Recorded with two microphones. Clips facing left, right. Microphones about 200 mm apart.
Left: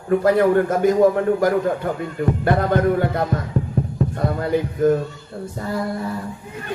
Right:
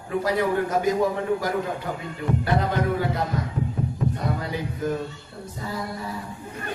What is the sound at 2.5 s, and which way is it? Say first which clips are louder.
Speech: left 7 dB; 55° left (ahead or behind).